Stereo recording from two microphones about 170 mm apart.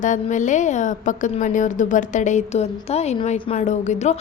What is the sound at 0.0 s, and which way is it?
A woman's voice, 45° left (ahead or behind).